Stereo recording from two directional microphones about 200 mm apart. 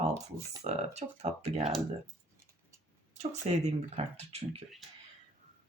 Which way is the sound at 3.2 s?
35° right (ahead or behind).